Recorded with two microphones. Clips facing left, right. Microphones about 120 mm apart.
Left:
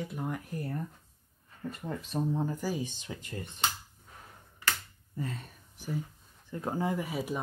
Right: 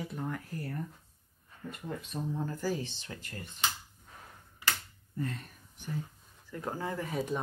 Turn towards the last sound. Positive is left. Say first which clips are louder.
# left 1 dB
turn(degrees=5)  # may be behind; listen again after turning